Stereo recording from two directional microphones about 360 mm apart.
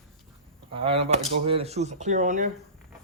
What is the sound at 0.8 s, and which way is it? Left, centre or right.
Speech, centre.